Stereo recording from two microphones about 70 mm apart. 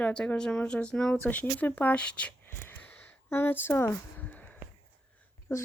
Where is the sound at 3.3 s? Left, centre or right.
Left.